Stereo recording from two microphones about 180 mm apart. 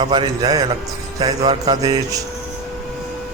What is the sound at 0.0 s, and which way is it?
A man's voice, 25° right (ahead or behind).